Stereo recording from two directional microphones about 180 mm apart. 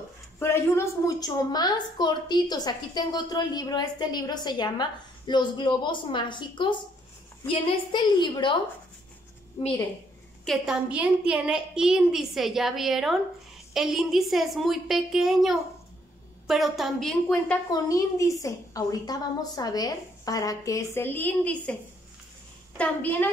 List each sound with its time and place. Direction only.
0.4 s a woman's voice: 15° left (ahead or behind)
9.6 s a woman's voice: 30° left (ahead or behind)
10.4 s a woman's voice: centre (ahead or behind)
17.6 s a woman's voice: 20° left (ahead or behind)
22.8 s a woman's voice: 10° left (ahead or behind)